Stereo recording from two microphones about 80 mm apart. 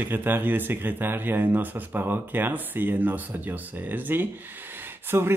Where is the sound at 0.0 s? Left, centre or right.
Right.